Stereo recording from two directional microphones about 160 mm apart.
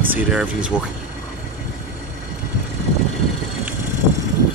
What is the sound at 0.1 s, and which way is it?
Speech, 5° right (ahead or behind).